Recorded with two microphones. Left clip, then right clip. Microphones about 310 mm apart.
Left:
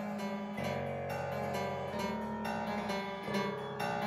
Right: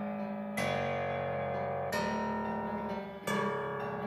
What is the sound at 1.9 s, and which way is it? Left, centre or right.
Music, right.